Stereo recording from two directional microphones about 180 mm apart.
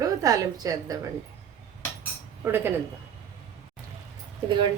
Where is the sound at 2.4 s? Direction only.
15° right (ahead or behind).